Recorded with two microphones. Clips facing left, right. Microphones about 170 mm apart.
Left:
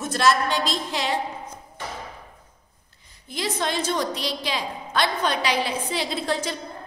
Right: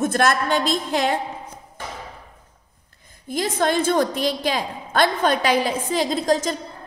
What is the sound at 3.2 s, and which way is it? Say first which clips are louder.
A woman's voice: right 6 dB; 50° right (ahead or behind).